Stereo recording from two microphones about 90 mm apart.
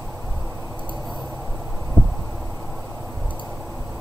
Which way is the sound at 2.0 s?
20° right (ahead or behind).